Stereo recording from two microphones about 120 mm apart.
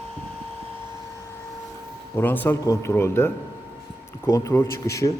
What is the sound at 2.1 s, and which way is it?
Speech, 15° left (ahead or behind).